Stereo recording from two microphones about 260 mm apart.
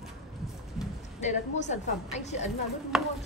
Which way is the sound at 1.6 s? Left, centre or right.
Left.